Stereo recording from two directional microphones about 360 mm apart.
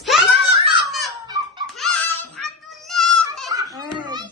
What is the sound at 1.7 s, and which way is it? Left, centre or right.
Music, centre.